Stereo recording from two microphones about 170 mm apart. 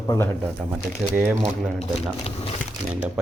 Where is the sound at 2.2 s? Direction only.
35° left (ahead or behind).